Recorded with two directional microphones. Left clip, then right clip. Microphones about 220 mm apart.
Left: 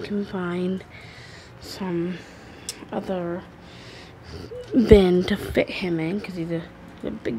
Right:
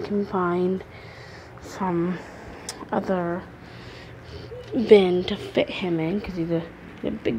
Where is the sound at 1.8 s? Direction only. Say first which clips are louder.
Right 5 dB; 10° left (ahead or behind).